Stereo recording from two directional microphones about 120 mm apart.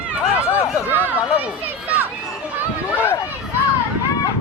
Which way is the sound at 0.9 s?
15° right (ahead or behind).